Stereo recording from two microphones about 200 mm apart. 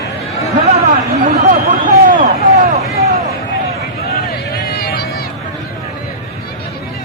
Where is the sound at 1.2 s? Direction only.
40° right (ahead or behind).